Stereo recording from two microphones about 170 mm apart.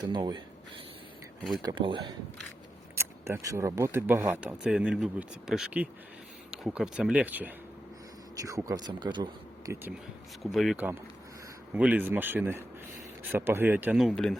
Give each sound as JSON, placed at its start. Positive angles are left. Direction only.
{"t": 0.1, "sound": "speech", "side_deg": -25}
{"t": 1.6, "sound": "speech", "side_deg": -30}
{"t": 2.9, "sound": "speech", "side_deg": -15}
{"t": 10.4, "sound": "speech", "side_deg": 0}
{"t": 10.8, "sound": "speech", "side_deg": -10}